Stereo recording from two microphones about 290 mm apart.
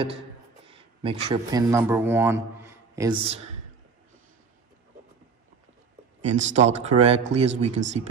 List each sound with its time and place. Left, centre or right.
0.7 s a man's voice: centre
6.2 s speech: right